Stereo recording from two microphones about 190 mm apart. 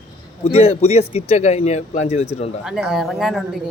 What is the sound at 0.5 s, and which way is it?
Speech, 30° left (ahead or behind).